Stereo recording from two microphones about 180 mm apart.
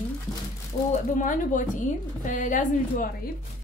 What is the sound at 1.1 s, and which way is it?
Speech, 45° left (ahead or behind).